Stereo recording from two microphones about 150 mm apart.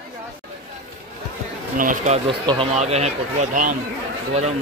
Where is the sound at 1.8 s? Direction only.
55° right (ahead or behind).